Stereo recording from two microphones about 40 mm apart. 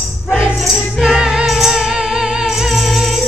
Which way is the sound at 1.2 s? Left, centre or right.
Centre.